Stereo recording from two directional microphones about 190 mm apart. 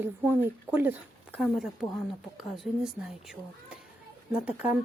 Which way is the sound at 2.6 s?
Centre (ahead or behind).